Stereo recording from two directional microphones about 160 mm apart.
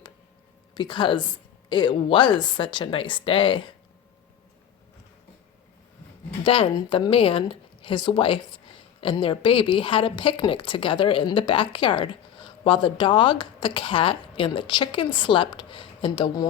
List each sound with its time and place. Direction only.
0.7 s a woman's voice: 30° left (ahead or behind)
6.4 s speech: 35° left (ahead or behind)